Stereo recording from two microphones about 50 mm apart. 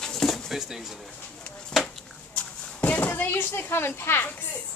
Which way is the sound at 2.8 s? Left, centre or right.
Left.